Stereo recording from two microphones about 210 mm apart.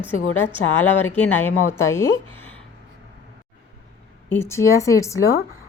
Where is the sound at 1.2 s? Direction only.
10° left (ahead or behind).